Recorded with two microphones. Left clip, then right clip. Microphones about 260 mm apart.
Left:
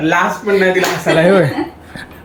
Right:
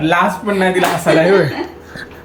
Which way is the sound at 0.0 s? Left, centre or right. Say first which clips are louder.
Even; centre.